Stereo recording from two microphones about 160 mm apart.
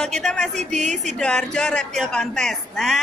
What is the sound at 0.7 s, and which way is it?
Speech, 45° right (ahead or behind).